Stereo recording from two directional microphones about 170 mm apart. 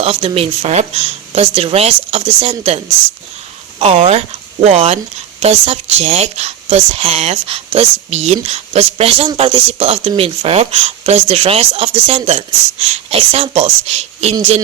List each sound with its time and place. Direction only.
0.0 s a woman's voice: 35° right (ahead or behind)